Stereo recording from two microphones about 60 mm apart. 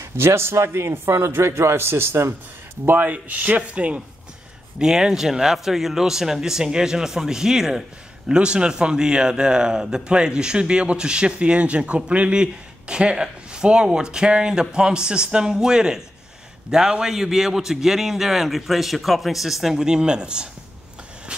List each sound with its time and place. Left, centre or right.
0.0 s a man's voice: right
2.8 s a man's voice: right
21.3 s vehicle: centre